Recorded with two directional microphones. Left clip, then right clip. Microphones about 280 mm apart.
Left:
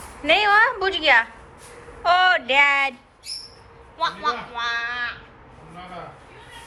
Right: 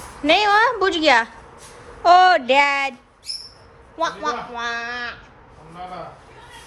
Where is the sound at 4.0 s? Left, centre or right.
Right.